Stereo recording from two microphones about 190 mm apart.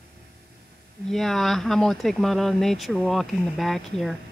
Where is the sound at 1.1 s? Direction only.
Centre (ahead or behind).